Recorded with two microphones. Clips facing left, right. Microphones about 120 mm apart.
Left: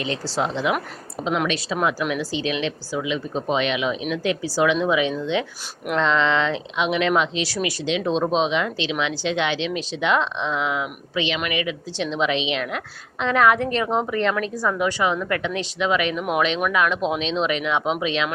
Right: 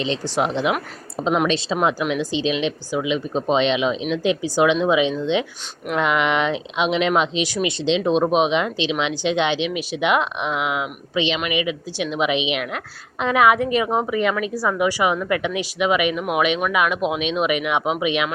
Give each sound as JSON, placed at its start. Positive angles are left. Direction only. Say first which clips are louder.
{"t": 0.0, "sound": "speech", "louder": "right 3 dB", "side_deg": -20}